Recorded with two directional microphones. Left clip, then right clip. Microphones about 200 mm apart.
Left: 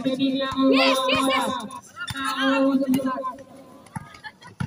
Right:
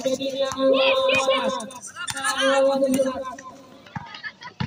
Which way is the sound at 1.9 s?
20° left (ahead or behind).